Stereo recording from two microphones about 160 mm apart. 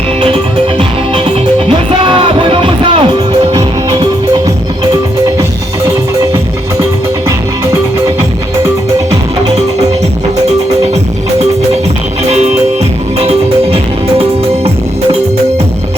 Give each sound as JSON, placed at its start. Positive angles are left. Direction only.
{"t": 0.2, "sound": "music", "side_deg": -35}
{"t": 5.4, "sound": "music", "side_deg": -20}
{"t": 12.2, "sound": "music", "side_deg": -40}